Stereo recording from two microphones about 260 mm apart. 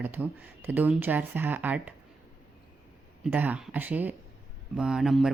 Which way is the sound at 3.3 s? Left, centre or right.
Centre.